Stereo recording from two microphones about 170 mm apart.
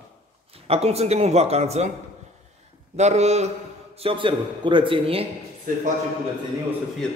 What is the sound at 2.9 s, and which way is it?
Speech, 40° right (ahead or behind).